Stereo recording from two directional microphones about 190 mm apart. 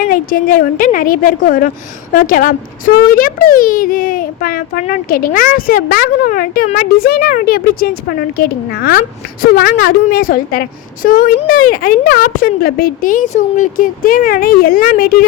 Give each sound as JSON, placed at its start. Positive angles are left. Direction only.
{"t": 0.1, "sound": "a woman's voice", "side_deg": 50}